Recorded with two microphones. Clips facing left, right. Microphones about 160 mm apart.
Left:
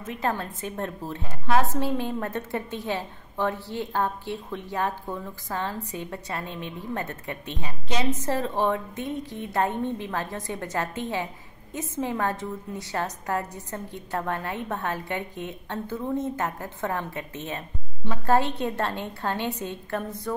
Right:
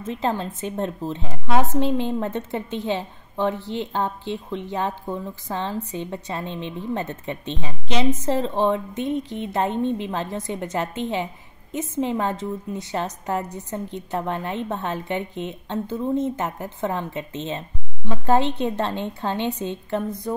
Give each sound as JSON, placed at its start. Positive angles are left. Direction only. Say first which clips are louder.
{"t": 0.0, "sound": "a woman's voice", "louder": "right 3 dB", "side_deg": -25}